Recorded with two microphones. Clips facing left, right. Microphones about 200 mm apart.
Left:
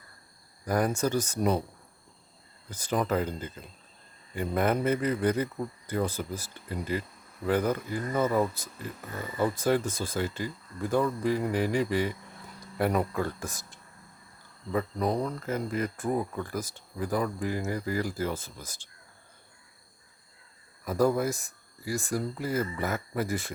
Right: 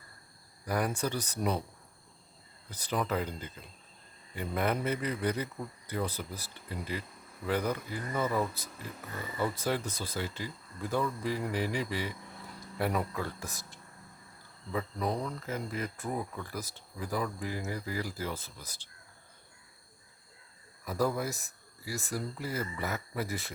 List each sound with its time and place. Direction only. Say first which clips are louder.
0.6 s speech: left 5 dB; 45° left (ahead or behind)
2.6 s speech: left 4 dB; 45° left (ahead or behind)
14.7 s speech: left 5 dB; 50° left (ahead or behind)
20.8 s speech: left 6 dB; 50° left (ahead or behind)